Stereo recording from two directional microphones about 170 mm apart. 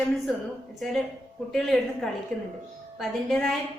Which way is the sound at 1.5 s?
Centre (ahead or behind).